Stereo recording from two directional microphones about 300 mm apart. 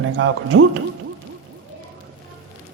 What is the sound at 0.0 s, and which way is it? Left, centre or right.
Speech, right.